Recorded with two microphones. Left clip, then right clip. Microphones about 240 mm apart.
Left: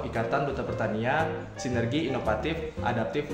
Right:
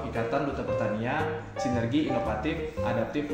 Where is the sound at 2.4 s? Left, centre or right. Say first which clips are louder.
Even; left.